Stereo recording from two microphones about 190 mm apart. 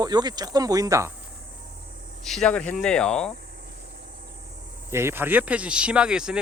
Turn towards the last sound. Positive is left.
turn(degrees=-5)  # may be behind; listen again after turning